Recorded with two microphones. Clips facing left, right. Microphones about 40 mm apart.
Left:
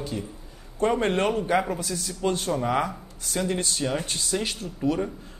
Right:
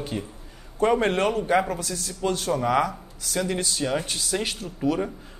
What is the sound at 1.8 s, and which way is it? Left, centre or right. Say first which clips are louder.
Speech: left 1 dB; left.